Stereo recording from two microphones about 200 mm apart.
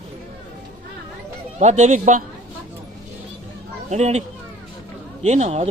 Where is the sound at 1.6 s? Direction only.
35° right (ahead or behind).